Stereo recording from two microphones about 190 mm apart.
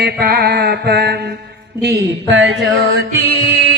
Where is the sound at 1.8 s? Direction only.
60° right (ahead or behind).